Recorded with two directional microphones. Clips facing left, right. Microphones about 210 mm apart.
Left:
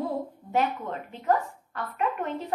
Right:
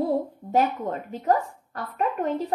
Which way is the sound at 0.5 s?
40° right (ahead or behind).